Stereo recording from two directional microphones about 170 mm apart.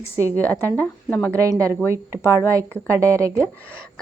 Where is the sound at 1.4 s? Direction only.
20° right (ahead or behind).